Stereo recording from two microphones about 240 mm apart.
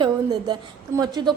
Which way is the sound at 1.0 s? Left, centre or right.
Centre.